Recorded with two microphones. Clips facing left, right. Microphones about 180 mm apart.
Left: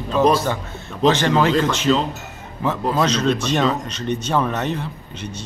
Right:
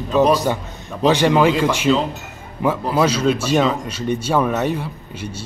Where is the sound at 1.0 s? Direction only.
10° right (ahead or behind).